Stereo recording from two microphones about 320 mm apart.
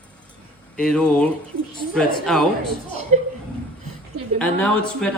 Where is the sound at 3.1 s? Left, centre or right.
Right.